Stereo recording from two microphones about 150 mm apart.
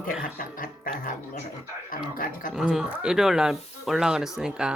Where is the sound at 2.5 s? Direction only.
5° right (ahead or behind).